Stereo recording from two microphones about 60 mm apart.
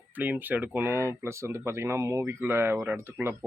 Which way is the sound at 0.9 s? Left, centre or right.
Right.